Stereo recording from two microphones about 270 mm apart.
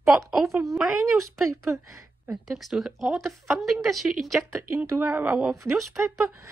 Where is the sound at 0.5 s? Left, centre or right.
Centre.